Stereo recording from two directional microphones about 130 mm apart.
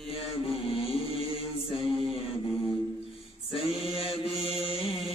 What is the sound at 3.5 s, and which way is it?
Mantra, 50° left (ahead or behind).